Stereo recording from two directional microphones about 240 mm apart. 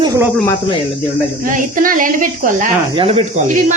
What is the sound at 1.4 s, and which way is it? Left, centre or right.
Speech, right.